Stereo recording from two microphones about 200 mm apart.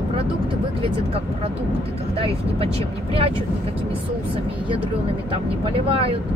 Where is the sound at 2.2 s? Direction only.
30° right (ahead or behind).